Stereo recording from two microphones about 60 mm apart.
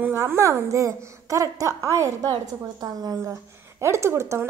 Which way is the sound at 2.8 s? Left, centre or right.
Right.